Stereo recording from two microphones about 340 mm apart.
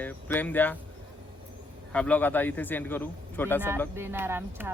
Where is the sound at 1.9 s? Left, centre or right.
Centre.